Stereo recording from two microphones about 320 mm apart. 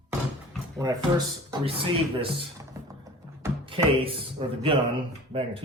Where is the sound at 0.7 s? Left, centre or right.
Centre.